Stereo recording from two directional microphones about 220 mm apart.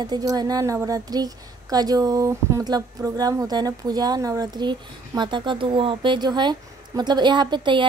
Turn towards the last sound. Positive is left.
turn(degrees=-20)  # may be behind; listen again after turning